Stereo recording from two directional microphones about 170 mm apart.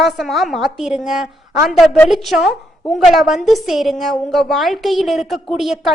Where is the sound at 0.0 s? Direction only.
Centre (ahead or behind).